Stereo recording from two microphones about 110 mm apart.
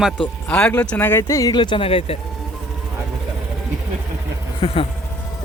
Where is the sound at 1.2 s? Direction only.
30° left (ahead or behind).